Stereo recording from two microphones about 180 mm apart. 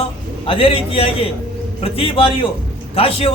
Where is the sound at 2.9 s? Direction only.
30° left (ahead or behind).